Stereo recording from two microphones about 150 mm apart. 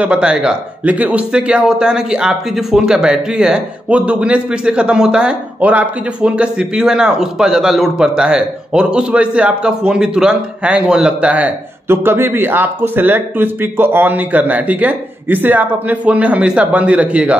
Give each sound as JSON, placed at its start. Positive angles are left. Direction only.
{"t": 0.0, "sound": "speech", "side_deg": -5}